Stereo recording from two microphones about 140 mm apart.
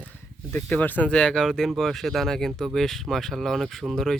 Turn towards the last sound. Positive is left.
turn(degrees=5)  # may be behind; listen again after turning